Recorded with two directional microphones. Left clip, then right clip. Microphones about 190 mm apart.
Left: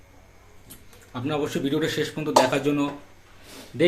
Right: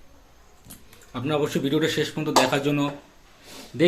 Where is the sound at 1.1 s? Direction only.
10° right (ahead or behind).